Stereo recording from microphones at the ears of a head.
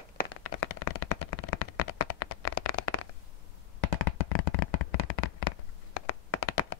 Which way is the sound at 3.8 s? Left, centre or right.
Left.